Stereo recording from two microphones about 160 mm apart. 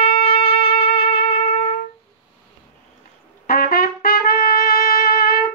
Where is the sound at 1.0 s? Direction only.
75° left (ahead or behind).